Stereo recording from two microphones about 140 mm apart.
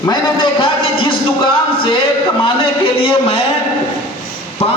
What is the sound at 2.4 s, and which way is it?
Speech, 40° left (ahead or behind).